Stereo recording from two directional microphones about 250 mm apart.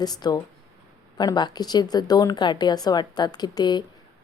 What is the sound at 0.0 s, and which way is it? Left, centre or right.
A woman's voice, centre.